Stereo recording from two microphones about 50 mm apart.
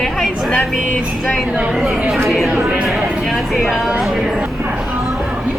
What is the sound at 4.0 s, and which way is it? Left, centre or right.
Speech, centre.